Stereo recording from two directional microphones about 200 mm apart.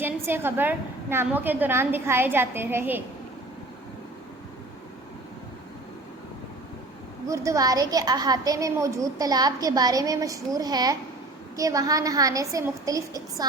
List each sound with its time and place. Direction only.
0.0 s a woman's voice: 10° right (ahead or behind)
7.3 s a woman's voice: 15° right (ahead or behind)